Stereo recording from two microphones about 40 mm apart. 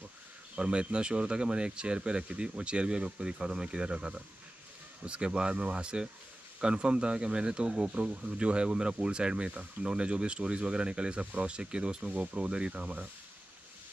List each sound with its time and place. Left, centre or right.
0.6 s speech: right